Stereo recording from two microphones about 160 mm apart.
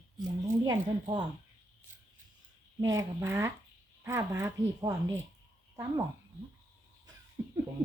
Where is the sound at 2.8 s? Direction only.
20° right (ahead or behind).